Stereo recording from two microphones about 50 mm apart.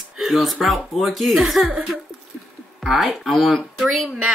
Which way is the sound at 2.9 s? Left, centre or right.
Centre.